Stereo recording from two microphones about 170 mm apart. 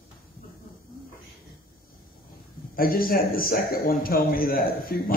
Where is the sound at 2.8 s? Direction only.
60° left (ahead or behind).